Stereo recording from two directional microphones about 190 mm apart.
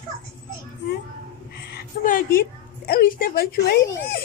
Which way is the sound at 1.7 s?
50° left (ahead or behind).